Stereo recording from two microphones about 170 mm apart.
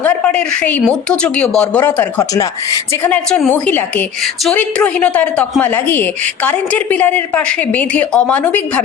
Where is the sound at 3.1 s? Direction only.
5° left (ahead or behind).